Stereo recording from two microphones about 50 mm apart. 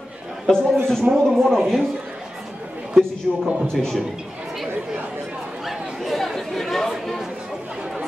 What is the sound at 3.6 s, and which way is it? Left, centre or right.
Speech, centre.